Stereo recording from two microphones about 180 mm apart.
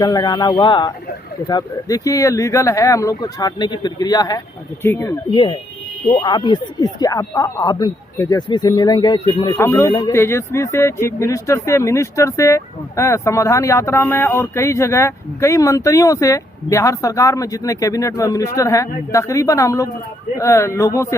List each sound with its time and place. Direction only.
0.0 s speech: 25° left (ahead or behind)
5.3 s speech: 25° left (ahead or behind)